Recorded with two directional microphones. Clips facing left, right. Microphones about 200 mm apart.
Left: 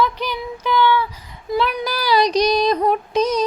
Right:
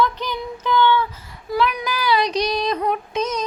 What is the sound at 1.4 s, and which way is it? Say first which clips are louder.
Female singing: left 1 dB; 30° left (ahead or behind).